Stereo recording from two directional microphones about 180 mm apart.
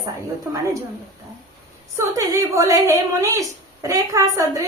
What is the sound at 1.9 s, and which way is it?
A woman's voice, 15° right (ahead or behind).